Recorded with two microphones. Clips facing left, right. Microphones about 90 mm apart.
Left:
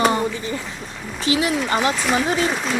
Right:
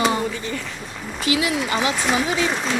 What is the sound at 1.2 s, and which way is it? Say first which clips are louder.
Speech: left 1 dB; 35° left (ahead or behind).